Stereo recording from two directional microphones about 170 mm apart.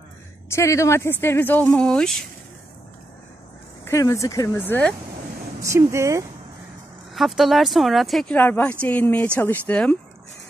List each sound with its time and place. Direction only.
0.5 s speech: 15° left (ahead or behind)
3.8 s speech: 20° left (ahead or behind)
5.6 s speech: 15° right (ahead or behind)
7.2 s speech: centre (ahead or behind)